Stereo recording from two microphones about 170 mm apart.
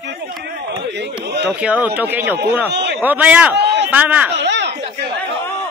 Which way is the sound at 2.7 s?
85° right.